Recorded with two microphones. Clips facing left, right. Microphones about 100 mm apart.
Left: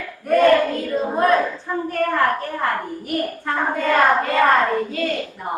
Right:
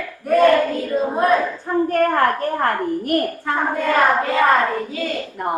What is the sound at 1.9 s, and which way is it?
A child's voice, 50° right (ahead or behind).